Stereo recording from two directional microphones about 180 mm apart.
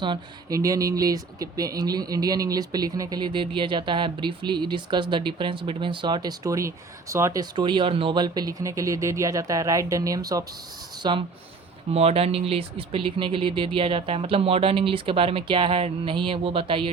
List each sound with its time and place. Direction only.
0.0 s speech: 20° right (ahead or behind)
11.9 s speech: 35° right (ahead or behind)